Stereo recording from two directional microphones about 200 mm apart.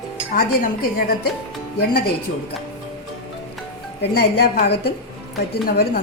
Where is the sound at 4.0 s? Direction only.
55° left (ahead or behind).